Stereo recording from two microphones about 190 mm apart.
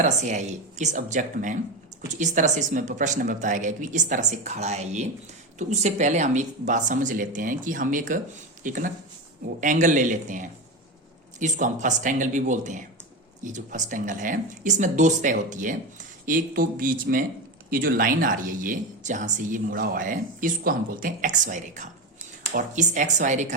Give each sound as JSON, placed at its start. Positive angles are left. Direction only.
{"t": 0.0, "sound": "speech", "side_deg": -40}